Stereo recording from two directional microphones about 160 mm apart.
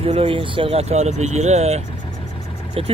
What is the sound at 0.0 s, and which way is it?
Speech, 35° right (ahead or behind).